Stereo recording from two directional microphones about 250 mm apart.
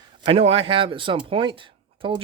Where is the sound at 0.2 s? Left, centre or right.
Right.